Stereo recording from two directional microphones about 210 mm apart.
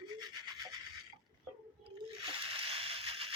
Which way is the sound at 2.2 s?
25° right (ahead or behind).